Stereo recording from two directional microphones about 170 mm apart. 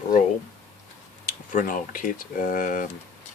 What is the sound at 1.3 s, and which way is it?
Speech, 50° left (ahead or behind).